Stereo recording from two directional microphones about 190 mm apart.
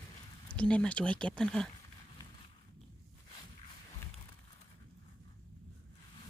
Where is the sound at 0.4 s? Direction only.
5° left (ahead or behind).